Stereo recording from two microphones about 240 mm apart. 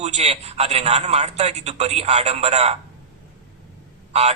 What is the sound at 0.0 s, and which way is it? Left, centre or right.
A man's voice, right.